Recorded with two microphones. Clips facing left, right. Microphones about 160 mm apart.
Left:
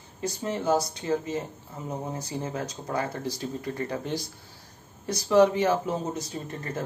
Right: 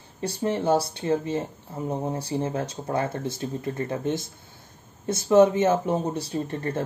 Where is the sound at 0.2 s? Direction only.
30° right (ahead or behind).